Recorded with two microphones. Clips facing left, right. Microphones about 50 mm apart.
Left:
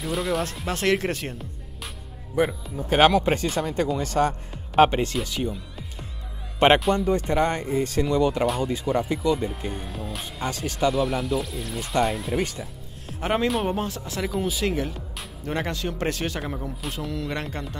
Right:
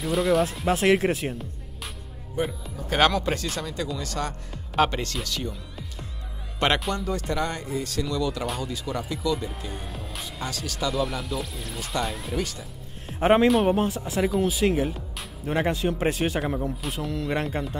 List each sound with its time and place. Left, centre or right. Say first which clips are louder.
0.0 s speech: right 4 dB; centre
2.9 s speech: left 4 dB; centre
3.6 s speech: left 6 dB; left; by 5.5 s centre
5.5 s music: left 3 dB; centre
6.8 s speech: left 6 dB; centre
7.1 s speech: left 5 dB; left
9.7 s music: left 4 dB; centre
10.2 s speech: left 3 dB; left
10.9 s speech: left 3 dB; centre
13.2 s a man's voice: right 5 dB; centre
13.5 s speech: right 4 dB; centre
15.6 s speech: right 5 dB; centre